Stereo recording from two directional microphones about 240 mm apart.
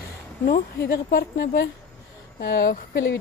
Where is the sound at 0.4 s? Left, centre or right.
Left.